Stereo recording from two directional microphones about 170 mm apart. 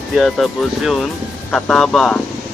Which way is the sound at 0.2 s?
Centre (ahead or behind).